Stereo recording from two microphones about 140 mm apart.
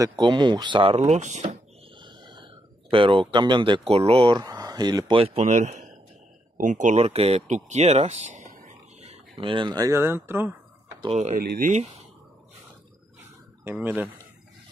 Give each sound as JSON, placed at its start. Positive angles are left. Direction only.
{"t": 0.0, "sound": "speech", "side_deg": -30}
{"t": 2.0, "sound": "speech", "side_deg": -35}
{"t": 5.2, "sound": "speech", "side_deg": -50}
{"t": 9.0, "sound": "speech", "side_deg": -35}
{"t": 11.3, "sound": "speech", "side_deg": -80}
{"t": 13.7, "sound": "speech", "side_deg": -15}